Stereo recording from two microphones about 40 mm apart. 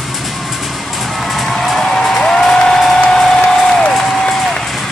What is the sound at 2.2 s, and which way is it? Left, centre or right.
Applause, centre.